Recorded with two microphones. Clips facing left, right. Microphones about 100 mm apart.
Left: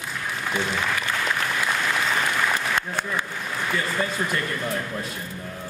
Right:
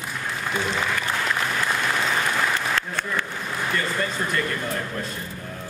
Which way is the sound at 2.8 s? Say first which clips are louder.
Even; 15° left (ahead or behind).